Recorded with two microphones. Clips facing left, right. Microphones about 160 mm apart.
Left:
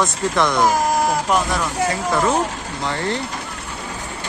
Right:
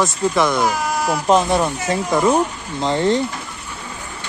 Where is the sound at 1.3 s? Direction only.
25° right (ahead or behind).